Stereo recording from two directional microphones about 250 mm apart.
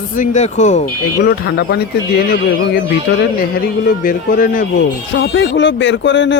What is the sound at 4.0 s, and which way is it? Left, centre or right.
Speech, left.